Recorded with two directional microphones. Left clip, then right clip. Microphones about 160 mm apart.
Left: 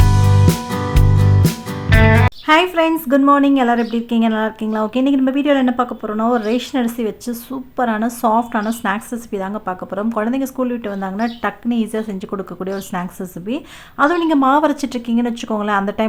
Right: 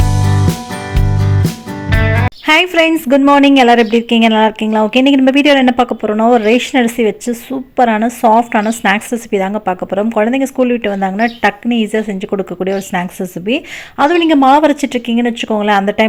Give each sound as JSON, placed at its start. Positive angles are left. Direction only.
{"t": 0.0, "sound": "music", "side_deg": 0}
{"t": 3.1, "sound": "speech", "side_deg": -20}